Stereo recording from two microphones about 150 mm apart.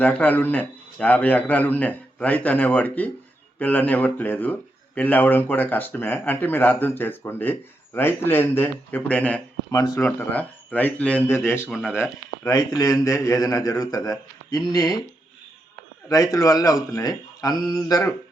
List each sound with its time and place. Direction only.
0.0 s speech: 10° left (ahead or behind)
9.7 s a man's voice: 20° left (ahead or behind)
11.7 s speech: centre (ahead or behind)
12.4 s a man's voice: 25° left (ahead or behind)
16.0 s a man's voice: 20° left (ahead or behind)